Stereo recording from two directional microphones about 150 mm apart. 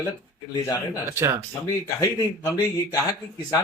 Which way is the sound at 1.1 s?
15° right (ahead or behind).